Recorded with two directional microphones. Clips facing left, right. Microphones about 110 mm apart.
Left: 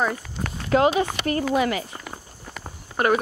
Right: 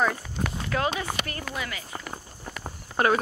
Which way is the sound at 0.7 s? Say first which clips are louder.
Left 10 dB; 25° left (ahead or behind).